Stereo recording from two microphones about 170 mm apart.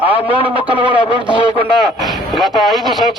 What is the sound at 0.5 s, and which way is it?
Speech, 30° right (ahead or behind).